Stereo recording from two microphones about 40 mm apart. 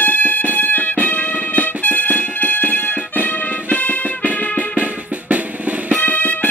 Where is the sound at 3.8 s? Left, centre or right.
Left.